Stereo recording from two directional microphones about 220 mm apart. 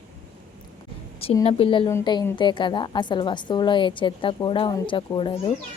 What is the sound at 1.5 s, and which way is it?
A woman's voice, 25° left (ahead or behind).